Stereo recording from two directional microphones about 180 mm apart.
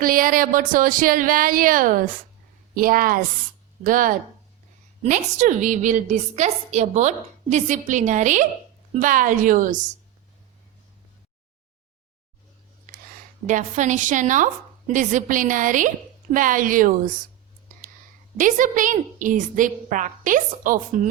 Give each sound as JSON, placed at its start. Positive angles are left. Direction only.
{"t": 0.0, "sound": "a woman's voice", "side_deg": -50}
{"t": 12.9, "sound": "a sound", "side_deg": -50}
{"t": 13.5, "sound": "a woman's voice", "side_deg": -45}
{"t": 18.3, "sound": "a woman's voice", "side_deg": -45}